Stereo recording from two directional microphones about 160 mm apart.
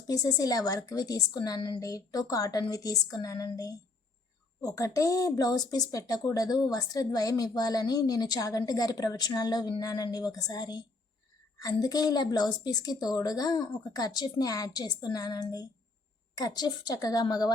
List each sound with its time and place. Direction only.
0.1 s a woman's voice: 25° left (ahead or behind)